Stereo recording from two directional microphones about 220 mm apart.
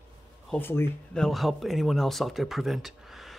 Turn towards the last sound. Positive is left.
turn(degrees=0)  # may be behind; listen again after turning